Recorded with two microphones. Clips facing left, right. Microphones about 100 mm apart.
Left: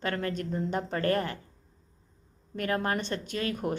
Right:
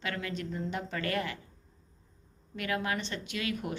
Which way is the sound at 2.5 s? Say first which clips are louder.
Left 4 dB; 40° left (ahead or behind).